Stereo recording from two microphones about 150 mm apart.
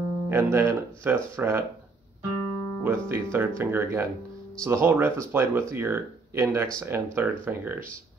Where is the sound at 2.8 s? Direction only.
15° right (ahead or behind).